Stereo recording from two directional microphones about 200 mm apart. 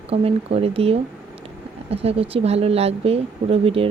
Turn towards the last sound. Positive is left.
turn(degrees=-30)  # may be behind; listen again after turning